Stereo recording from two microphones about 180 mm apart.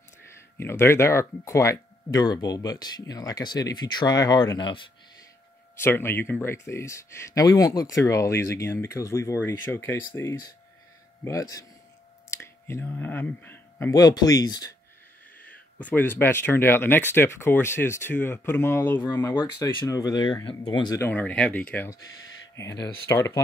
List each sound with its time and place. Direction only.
0.6 s speech: 15° left (ahead or behind)
5.8 s speech: 10° left (ahead or behind)
12.3 s speech: 15° left (ahead or behind)
15.8 s speech: 10° left (ahead or behind)
21.0 s speech: 10° left (ahead or behind)